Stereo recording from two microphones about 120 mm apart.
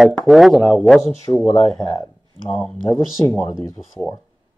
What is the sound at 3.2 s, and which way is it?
Speech, 10° left (ahead or behind).